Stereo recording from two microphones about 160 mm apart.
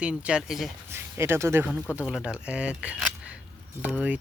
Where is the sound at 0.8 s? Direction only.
15° right (ahead or behind).